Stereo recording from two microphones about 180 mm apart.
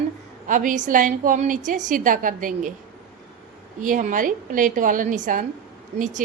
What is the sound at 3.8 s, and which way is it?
A woman's voice, 45° right (ahead or behind).